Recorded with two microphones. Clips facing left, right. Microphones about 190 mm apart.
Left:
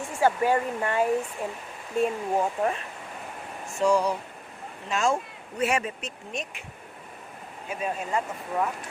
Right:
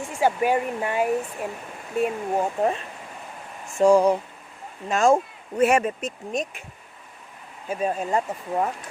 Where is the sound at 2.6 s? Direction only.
25° right (ahead or behind).